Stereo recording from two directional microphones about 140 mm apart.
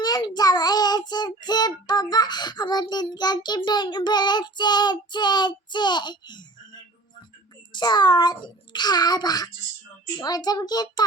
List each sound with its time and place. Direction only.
0.0 s child singing: 30° left (ahead or behind)
7.7 s child singing: 30° left (ahead or behind)
10.2 s a child's voice: 30° left (ahead or behind)